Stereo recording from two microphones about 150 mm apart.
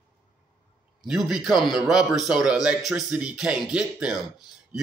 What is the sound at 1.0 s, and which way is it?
Speech, centre (ahead or behind).